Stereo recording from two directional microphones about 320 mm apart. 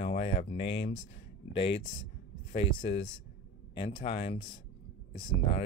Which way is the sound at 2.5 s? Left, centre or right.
Centre.